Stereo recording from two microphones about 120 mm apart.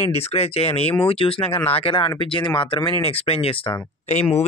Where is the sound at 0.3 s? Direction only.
60° left (ahead or behind).